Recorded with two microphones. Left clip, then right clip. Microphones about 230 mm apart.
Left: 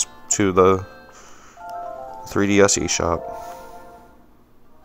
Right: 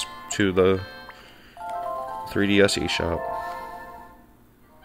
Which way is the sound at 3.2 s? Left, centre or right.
Right.